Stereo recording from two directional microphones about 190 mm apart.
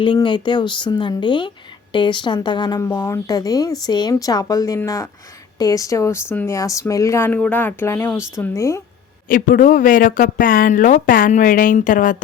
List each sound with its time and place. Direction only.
0.0 s speech: 25° left (ahead or behind)
9.3 s speech: 45° left (ahead or behind)